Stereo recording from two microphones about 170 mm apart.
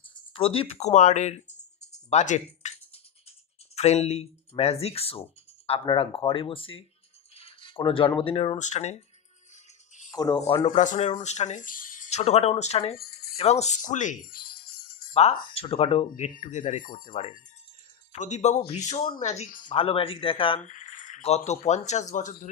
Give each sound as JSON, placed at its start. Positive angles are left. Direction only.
{"t": 0.3, "sound": "speech", "side_deg": 35}
{"t": 2.0, "sound": "music", "side_deg": 45}
{"t": 3.7, "sound": "speech", "side_deg": 40}
{"t": 7.3, "sound": "a sound", "side_deg": 35}
{"t": 8.2, "sound": "speech", "side_deg": 35}
{"t": 10.1, "sound": "speech", "side_deg": 25}
{"t": 10.8, "sound": "speech", "side_deg": 45}
{"t": 12.9, "sound": "music", "side_deg": 65}
{"t": 13.4, "sound": "music", "side_deg": 40}
{"t": 15.5, "sound": "speech", "side_deg": 35}
{"t": 19.7, "sound": "speech", "side_deg": 30}
{"t": 20.6, "sound": "speech", "side_deg": 50}